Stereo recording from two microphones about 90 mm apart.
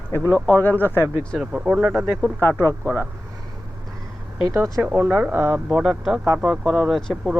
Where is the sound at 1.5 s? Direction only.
10° right (ahead or behind).